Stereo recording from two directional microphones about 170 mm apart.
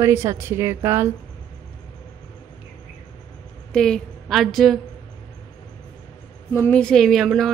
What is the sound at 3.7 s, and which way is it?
A woman's voice, 5° left (ahead or behind).